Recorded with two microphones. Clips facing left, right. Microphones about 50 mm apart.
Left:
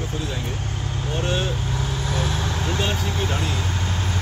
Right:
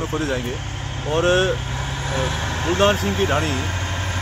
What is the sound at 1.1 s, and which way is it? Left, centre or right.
Speech, right.